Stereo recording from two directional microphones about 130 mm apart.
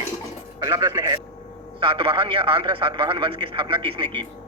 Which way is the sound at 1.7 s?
40° right (ahead or behind).